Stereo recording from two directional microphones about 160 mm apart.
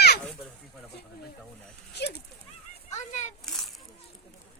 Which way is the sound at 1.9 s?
90° left.